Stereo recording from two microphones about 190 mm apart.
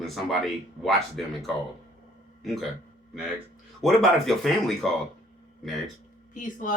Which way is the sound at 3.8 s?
Centre (ahead or behind).